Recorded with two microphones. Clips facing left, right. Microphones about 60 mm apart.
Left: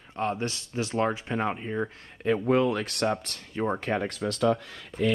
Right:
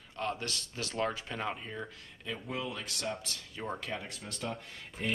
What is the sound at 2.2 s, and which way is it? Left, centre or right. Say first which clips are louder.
Speech: left 15 dB; left.